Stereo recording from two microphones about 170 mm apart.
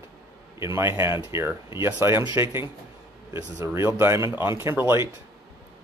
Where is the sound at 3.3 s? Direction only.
15° right (ahead or behind).